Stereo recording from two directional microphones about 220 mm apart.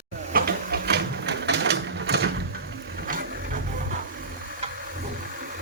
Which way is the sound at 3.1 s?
40° right (ahead or behind).